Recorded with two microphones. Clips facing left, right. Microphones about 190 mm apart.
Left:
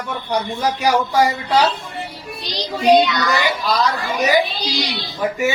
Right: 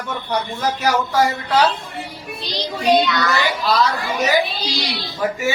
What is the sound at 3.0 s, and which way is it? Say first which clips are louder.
Speech: left 1 dB; 15° left (ahead or behind).